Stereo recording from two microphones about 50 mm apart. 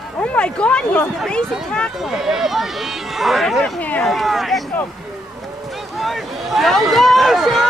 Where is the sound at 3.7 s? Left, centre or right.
Left.